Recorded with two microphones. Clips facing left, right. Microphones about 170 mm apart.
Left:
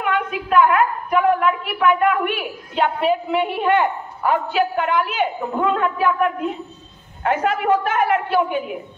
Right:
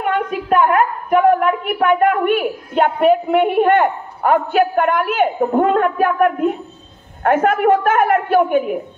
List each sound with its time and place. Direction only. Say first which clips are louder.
0.0 s a woman's voice: right 3 dB; 45° right (ahead or behind)